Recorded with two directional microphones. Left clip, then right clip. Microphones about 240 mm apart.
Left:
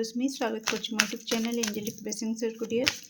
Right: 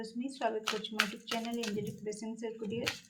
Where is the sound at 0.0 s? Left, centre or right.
Left.